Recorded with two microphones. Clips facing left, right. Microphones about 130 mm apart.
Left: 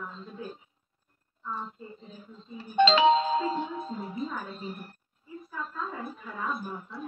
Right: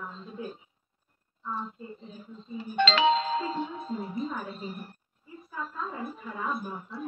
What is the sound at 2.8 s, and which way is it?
Music, 15° left (ahead or behind).